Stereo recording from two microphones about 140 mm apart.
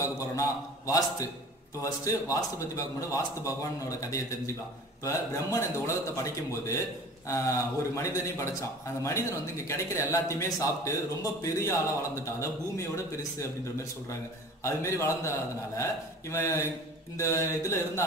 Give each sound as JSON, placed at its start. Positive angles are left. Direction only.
{"t": 0.0, "sound": "a man's voice", "side_deg": 25}
{"t": 14.6, "sound": "a man's voice", "side_deg": 20}